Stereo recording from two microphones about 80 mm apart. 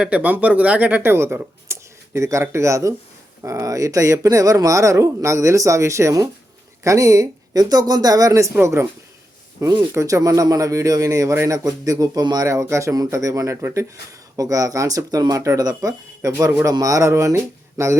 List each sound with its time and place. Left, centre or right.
0.0 s speech: centre; by 8.5 s right
8.6 s speech: right
9.9 s speech: right
12.5 s speech: right
16.5 s speech: right